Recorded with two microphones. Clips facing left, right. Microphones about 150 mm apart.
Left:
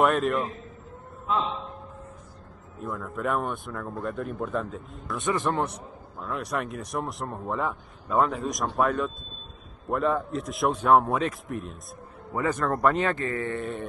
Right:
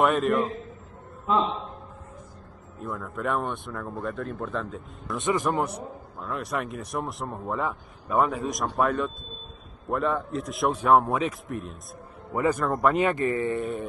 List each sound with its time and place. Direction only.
0.0 s a man's voice: centre (ahead or behind)
2.8 s a man's voice: centre (ahead or behind)
13.0 s speech: 20° right (ahead or behind)
13.6 s a man's voice: centre (ahead or behind)